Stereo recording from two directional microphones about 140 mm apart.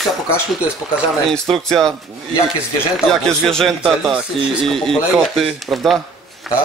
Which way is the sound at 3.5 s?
Centre (ahead or behind).